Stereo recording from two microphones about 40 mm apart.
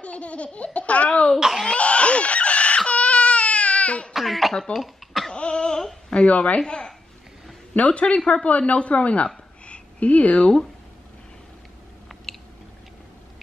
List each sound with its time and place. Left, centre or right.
0.0 s speech: left
1.7 s a sound: left
2.9 s baby cry: left
4.1 s cough: centre
5.3 s cough: left
6.2 s speech: left
6.6 s a woman's voice: centre
7.7 s speech: left
9.7 s a sound: left